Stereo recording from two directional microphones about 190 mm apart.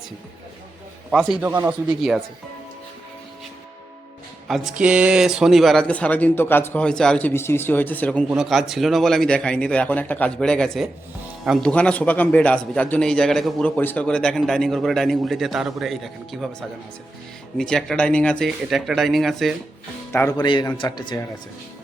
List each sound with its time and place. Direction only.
1.1 s a man's voice: centre (ahead or behind)
1.5 s speech: 15° right (ahead or behind)
1.9 s a man's voice: 5° right (ahead or behind)
4.4 s a man's voice: centre (ahead or behind)
17.6 s a man's voice: centre (ahead or behind)
20.3 s a man's voice: 25° left (ahead or behind)